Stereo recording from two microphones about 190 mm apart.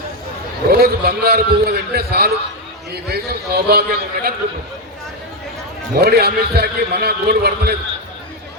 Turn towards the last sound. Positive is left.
turn(degrees=-55)  # may be behind; listen again after turning